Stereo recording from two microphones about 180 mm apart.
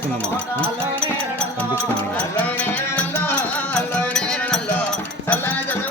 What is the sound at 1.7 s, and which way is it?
Music, 10° left (ahead or behind).